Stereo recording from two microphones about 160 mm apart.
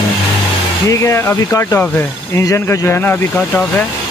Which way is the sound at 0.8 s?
20° left (ahead or behind).